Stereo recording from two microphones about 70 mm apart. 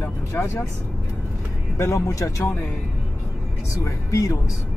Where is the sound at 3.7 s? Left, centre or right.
Left.